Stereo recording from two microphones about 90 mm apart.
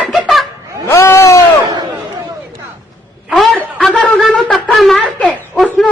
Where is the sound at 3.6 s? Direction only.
10° left (ahead or behind).